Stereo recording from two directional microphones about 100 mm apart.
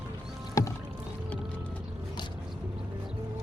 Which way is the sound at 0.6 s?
35° left (ahead or behind).